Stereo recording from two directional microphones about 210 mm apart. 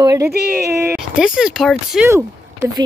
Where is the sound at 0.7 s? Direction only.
10° right (ahead or behind).